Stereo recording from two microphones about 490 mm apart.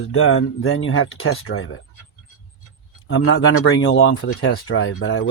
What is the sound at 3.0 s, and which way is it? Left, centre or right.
Speech, left.